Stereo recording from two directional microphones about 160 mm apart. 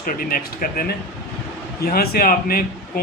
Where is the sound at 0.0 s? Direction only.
60° left (ahead or behind).